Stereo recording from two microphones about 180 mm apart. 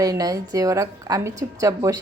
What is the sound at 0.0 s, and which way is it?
A woman's voice, 20° right (ahead or behind).